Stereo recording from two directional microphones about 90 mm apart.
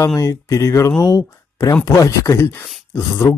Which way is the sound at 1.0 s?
45° left (ahead or behind).